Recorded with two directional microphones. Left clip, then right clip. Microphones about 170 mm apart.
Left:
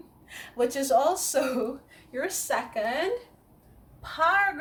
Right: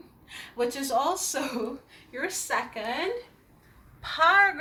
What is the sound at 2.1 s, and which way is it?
Speech, 20° left (ahead or behind).